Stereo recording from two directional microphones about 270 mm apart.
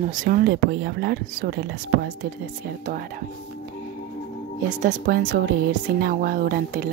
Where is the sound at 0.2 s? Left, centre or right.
Right.